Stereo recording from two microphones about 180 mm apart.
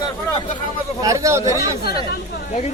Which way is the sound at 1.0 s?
15° right (ahead or behind).